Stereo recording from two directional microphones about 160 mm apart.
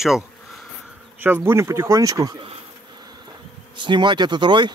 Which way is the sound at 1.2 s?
15° right (ahead or behind).